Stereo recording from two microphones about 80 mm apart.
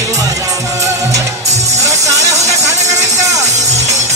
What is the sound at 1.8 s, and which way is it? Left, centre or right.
Music, right.